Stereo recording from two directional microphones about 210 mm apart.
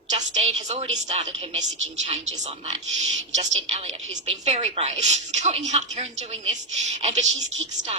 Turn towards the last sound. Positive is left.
turn(degrees=-30)  # may be behind; listen again after turning